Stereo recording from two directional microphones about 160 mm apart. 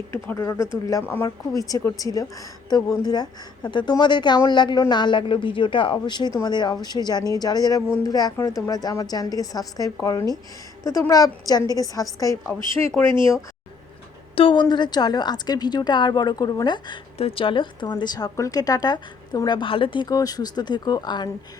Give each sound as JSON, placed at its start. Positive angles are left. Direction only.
{"t": 0.1, "sound": "a woman's voice", "side_deg": 15}
{"t": 14.3, "sound": "a woman's voice", "side_deg": 30}